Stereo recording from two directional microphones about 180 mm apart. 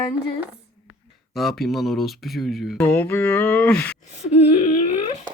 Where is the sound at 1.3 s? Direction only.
Centre (ahead or behind).